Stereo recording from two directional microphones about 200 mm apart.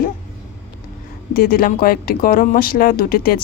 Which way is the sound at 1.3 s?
50° left (ahead or behind).